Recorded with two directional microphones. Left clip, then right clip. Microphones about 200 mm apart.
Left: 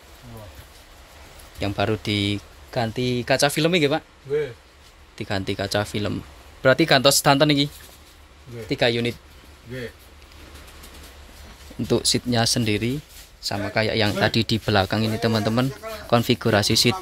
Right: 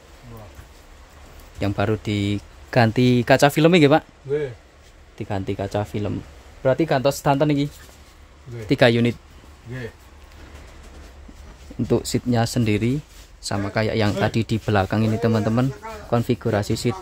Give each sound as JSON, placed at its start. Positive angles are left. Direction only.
{"t": 1.6, "sound": "speech", "side_deg": -5}
{"t": 2.7, "sound": "speech", "side_deg": -30}
{"t": 5.1, "sound": "speech", "side_deg": -5}
{"t": 8.6, "sound": "speech", "side_deg": -25}
{"t": 11.9, "sound": "speech", "side_deg": -5}